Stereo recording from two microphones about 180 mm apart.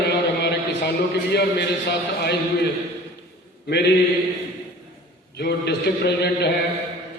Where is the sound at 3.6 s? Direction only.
65° left (ahead or behind).